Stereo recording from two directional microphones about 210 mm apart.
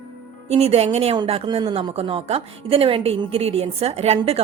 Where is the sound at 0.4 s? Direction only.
30° right (ahead or behind).